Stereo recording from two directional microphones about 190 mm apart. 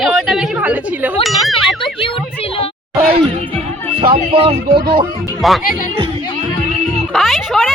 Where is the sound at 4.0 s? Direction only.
30° right (ahead or behind).